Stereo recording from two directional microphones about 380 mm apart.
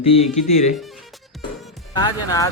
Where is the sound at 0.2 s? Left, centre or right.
Centre.